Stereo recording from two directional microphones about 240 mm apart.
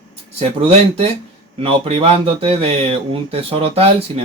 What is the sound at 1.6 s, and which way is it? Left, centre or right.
Speech, right.